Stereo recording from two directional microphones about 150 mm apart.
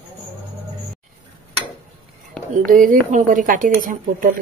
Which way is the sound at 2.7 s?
60° right (ahead or behind).